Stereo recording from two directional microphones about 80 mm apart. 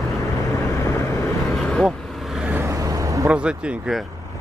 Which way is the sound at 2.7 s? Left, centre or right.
Right.